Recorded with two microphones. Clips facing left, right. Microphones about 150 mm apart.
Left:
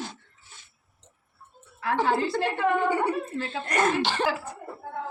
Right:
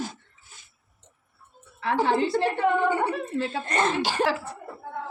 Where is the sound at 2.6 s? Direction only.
20° right (ahead or behind).